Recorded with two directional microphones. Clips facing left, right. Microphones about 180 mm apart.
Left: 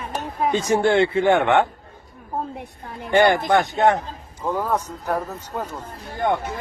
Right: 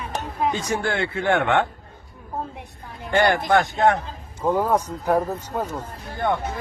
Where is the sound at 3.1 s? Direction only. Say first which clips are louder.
Left 2 dB; 15° left (ahead or behind).